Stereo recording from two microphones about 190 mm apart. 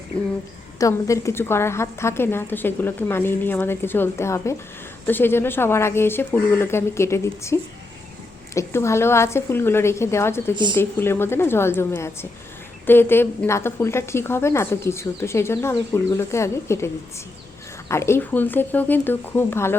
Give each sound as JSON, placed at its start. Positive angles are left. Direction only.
{"t": 0.8, "sound": "a woman's voice", "side_deg": 15}
{"t": 10.5, "sound": "speech", "side_deg": -25}
{"t": 10.8, "sound": "a woman's voice", "side_deg": 10}